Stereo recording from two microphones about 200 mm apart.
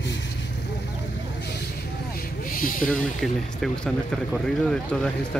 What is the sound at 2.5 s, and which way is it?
Speech, 45° left (ahead or behind).